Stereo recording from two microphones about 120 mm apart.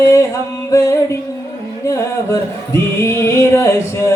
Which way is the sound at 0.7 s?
30° left (ahead or behind).